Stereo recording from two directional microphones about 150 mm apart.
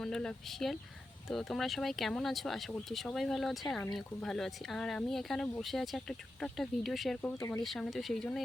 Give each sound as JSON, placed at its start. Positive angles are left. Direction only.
{"t": 0.0, "sound": "speech", "side_deg": 5}
{"t": 7.3, "sound": "speech", "side_deg": 20}
{"t": 7.6, "sound": "speech", "side_deg": 0}